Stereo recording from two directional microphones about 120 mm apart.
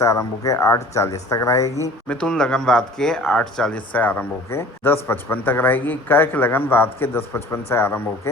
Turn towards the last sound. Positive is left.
turn(degrees=20)  # may be behind; listen again after turning